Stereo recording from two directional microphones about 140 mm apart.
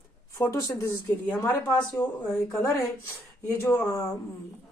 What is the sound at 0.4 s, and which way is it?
Speech, 20° left (ahead or behind).